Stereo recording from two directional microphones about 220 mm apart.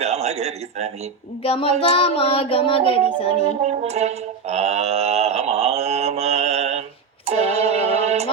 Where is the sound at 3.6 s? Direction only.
30° right (ahead or behind).